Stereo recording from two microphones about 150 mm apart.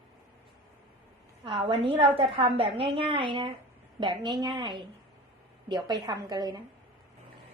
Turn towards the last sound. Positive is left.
turn(degrees=-25)  # may be behind; listen again after turning